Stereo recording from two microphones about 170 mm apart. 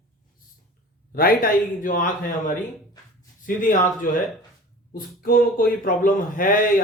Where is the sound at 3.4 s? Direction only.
50° left (ahead or behind).